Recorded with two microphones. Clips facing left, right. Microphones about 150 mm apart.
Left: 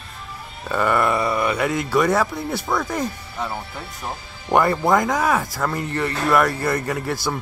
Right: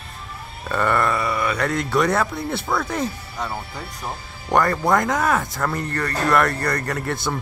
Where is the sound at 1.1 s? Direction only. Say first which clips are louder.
Left 2 dB; 25° left (ahead or behind).